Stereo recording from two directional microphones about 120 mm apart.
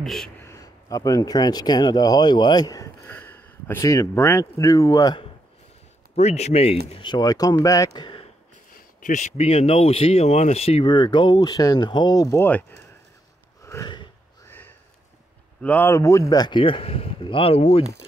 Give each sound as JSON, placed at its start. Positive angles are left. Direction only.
{"t": 0.0, "sound": "a man's voice", "side_deg": 0}
{"t": 0.5, "sound": "speech", "side_deg": 30}
{"t": 6.1, "sound": "speech", "side_deg": 65}
{"t": 7.0, "sound": "speech", "side_deg": 35}
{"t": 9.0, "sound": "speech", "side_deg": 80}
{"t": 10.9, "sound": "speech", "side_deg": 40}
{"t": 13.7, "sound": "snort", "side_deg": 25}
{"t": 15.6, "sound": "speech", "side_deg": 15}
{"t": 15.9, "sound": "speech", "side_deg": 25}